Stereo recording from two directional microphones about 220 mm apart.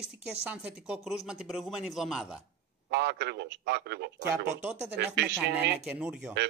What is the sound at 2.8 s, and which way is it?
Speech, 50° right (ahead or behind).